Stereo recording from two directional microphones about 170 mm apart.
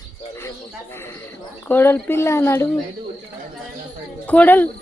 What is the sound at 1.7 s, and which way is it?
Speech, 10° left (ahead or behind).